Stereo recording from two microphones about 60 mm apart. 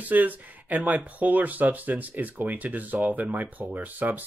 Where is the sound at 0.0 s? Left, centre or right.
Right.